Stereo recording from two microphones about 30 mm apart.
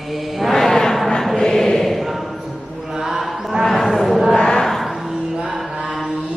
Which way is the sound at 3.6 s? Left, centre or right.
Centre.